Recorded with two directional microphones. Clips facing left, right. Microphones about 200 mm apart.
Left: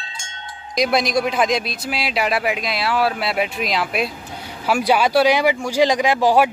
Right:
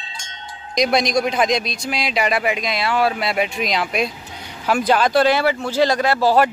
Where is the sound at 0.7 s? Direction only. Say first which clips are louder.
Right 1 dB; 5° left (ahead or behind).